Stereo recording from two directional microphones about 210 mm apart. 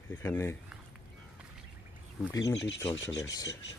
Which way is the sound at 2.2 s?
15° left (ahead or behind).